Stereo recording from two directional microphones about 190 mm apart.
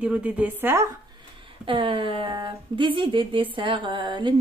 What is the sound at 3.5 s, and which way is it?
Music, 25° right (ahead or behind).